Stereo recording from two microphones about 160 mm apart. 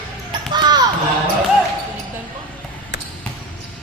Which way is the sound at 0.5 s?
25° right (ahead or behind).